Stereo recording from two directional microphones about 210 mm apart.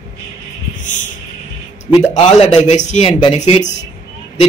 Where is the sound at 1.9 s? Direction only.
25° left (ahead or behind).